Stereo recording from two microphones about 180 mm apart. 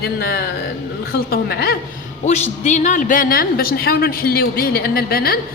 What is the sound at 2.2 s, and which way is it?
A woman's voice, 40° left (ahead or behind).